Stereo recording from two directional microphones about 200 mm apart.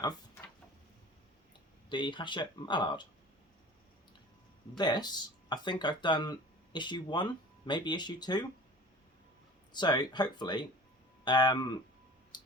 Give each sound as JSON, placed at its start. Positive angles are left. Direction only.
{"t": 1.9, "sound": "speech", "side_deg": 25}
{"t": 4.8, "sound": "speech", "side_deg": 20}
{"t": 9.7, "sound": "speech", "side_deg": 20}
{"t": 12.3, "sound": "music", "side_deg": 20}